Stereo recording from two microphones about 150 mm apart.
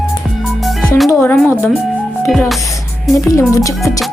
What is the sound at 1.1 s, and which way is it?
Speech, 15° left (ahead or behind).